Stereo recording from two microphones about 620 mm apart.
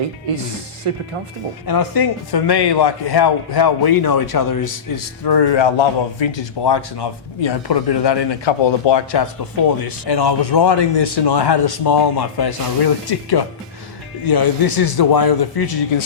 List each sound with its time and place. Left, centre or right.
0.9 s speech: right
1.6 s a man's voice: left
14.3 s a man's voice: left